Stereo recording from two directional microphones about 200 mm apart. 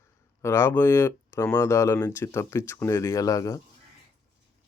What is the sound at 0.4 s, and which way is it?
Speech, 15° left (ahead or behind).